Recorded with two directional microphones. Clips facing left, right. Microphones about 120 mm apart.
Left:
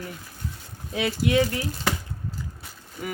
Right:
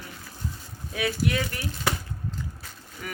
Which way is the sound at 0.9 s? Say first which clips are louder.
Left 4 dB; 25° left (ahead or behind).